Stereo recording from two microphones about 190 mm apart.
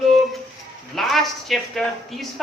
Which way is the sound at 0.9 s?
Centre (ahead or behind).